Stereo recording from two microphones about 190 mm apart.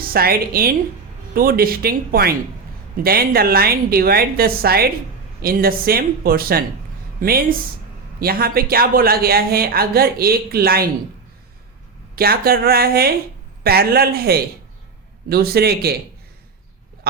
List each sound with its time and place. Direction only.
0.0 s speech: 50° right (ahead or behind)
12.1 s speech: 55° right (ahead or behind)